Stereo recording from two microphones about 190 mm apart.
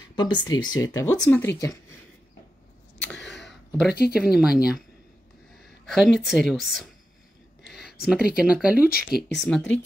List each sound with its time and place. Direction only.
0.1 s speech: 25° left (ahead or behind)
4.1 s speech: 5° right (ahead or behind)
5.9 s speech: centre (ahead or behind)
8.0 s speech: centre (ahead or behind)
8.8 s speech: 55° left (ahead or behind)
9.4 s speech: 5° left (ahead or behind)